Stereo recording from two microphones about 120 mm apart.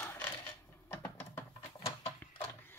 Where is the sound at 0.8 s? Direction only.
20° left (ahead or behind).